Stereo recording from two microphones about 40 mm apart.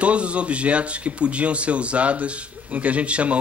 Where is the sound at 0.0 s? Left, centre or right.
Right.